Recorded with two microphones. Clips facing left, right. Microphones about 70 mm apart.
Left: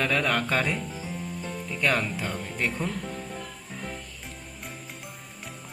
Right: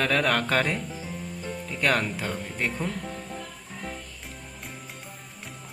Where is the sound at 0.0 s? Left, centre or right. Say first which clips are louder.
Right 1 dB; right.